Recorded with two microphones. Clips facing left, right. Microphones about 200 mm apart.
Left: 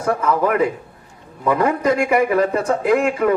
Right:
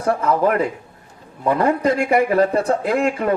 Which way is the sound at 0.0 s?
30° right (ahead or behind).